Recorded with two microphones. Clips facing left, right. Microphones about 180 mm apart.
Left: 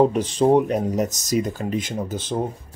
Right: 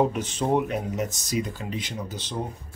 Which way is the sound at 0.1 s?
35° left (ahead or behind).